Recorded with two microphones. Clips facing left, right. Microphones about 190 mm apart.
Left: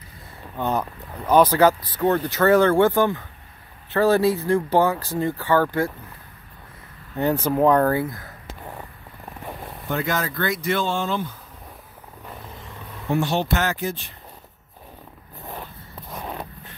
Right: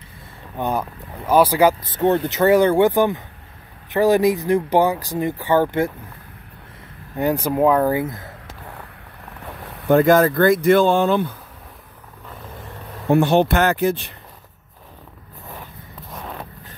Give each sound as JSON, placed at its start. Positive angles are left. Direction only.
{"t": 0.6, "sound": "speech", "side_deg": -10}
{"t": 1.8, "sound": "speech", "side_deg": -25}
{"t": 7.2, "sound": "speech", "side_deg": -15}
{"t": 9.8, "sound": "speech", "side_deg": -55}
{"t": 13.1, "sound": "speech", "side_deg": -60}